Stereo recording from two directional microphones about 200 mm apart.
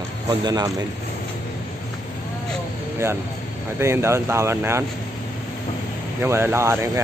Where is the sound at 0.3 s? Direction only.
20° right (ahead or behind).